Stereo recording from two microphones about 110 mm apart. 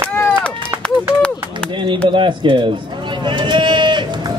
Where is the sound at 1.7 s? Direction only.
50° right (ahead or behind).